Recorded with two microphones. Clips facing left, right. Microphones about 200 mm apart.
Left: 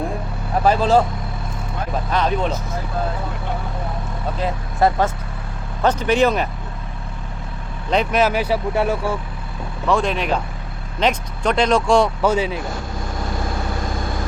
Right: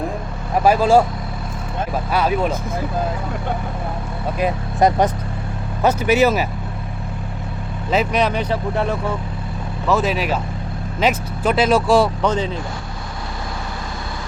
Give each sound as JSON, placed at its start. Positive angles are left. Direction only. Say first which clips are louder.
{"t": 0.6, "sound": "speech", "louder": "right 2 dB", "side_deg": -10}
{"t": 2.1, "sound": "speech", "louder": "right 2 dB", "side_deg": -10}
{"t": 4.4, "sound": "speech", "louder": "right 2 dB", "side_deg": -15}
{"t": 7.9, "sound": "speech", "louder": "left 1 dB", "side_deg": 0}
{"t": 9.8, "sound": "speech", "louder": "right 1 dB", "side_deg": -5}
{"t": 12.2, "sound": "speech", "louder": "left 1 dB", "side_deg": 10}